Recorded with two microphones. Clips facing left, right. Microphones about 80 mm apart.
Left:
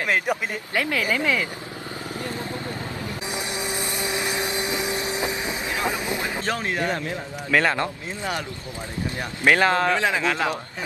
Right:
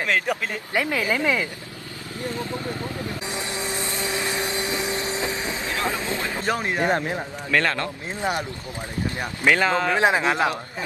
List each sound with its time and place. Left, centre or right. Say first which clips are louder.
0.0 s speech: even; centre
0.7 s speech: right 1 dB; right
3.3 s vehicle: left 3 dB; centre
6.4 s speech: right 5 dB; right
7.5 s speech: left 2 dB; centre
8.2 s speech: right 3 dB; right
9.6 s speech: left 2 dB; centre
9.9 s speech: right 3 dB; right